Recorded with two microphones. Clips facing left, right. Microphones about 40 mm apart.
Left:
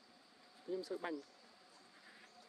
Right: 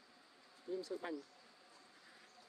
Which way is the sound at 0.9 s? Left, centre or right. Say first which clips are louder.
Left 1 dB; left.